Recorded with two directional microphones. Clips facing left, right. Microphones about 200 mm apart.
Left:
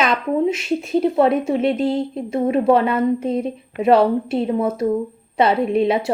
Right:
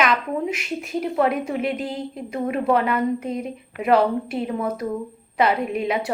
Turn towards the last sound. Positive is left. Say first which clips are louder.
# left 6 dB
turn(degrees=25)  # may be behind; listen again after turning